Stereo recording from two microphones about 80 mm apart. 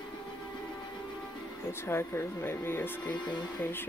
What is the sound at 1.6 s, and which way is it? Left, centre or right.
Speech, left.